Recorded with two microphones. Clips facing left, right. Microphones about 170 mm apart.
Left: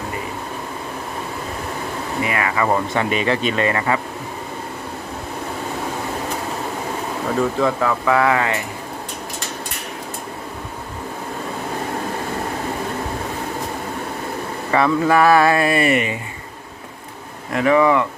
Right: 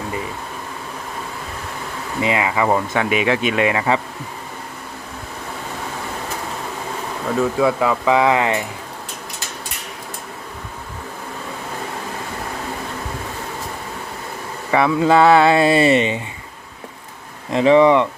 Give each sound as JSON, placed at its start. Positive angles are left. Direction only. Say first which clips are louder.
{"t": 2.2, "sound": "speech", "louder": "right 3 dB", "side_deg": -20}
{"t": 2.6, "sound": "speech", "louder": "right 1 dB", "side_deg": -5}
{"t": 7.3, "sound": "speech", "louder": "right 2 dB", "side_deg": 0}
{"t": 7.8, "sound": "speech", "louder": "right 1 dB", "side_deg": -15}
{"t": 14.7, "sound": "speech", "louder": "right 1 dB", "side_deg": -10}
{"t": 17.5, "sound": "speech", "louder": "right 3 dB", "side_deg": -25}